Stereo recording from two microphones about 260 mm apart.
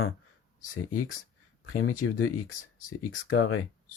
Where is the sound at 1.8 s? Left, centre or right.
Left.